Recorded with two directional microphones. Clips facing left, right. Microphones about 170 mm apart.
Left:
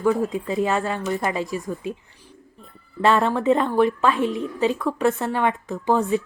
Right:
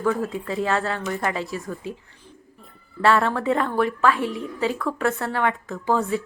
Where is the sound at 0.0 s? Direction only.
15° left (ahead or behind).